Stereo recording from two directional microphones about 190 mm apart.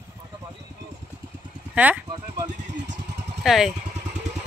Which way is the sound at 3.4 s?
Centre (ahead or behind).